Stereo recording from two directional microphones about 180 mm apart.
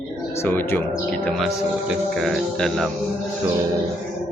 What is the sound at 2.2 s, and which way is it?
Speech, centre (ahead or behind).